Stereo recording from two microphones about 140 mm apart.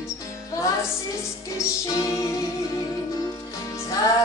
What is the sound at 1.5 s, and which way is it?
Music, 20° left (ahead or behind).